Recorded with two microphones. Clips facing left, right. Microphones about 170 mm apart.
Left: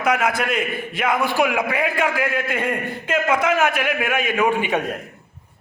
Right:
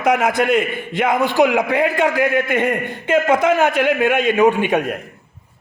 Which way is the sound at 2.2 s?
90° right.